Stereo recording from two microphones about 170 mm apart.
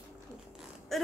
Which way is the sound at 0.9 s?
Centre (ahead or behind).